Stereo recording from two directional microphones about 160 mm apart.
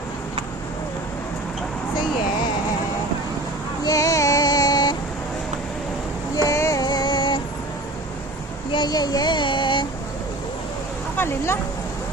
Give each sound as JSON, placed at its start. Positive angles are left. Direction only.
{"t": 3.8, "sound": "female singing", "side_deg": 20}
{"t": 6.3, "sound": "female singing", "side_deg": 20}
{"t": 8.7, "sound": "child singing", "side_deg": 25}
{"t": 11.2, "sound": "speech", "side_deg": 15}